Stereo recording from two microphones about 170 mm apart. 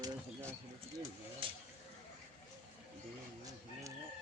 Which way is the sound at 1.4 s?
30° right (ahead or behind).